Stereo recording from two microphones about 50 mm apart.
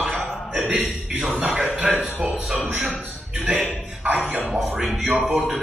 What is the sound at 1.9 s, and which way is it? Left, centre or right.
Speech, right.